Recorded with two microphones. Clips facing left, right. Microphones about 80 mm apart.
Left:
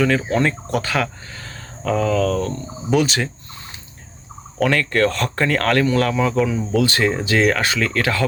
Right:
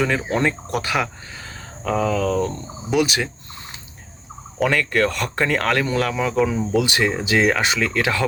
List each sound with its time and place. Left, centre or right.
0.0 s speech: centre
2.9 s speech: centre
4.6 s speech: centre